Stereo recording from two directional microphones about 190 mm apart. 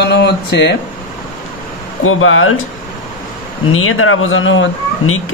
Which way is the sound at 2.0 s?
90° left.